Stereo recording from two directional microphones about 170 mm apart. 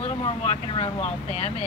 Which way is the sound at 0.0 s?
35° left (ahead or behind).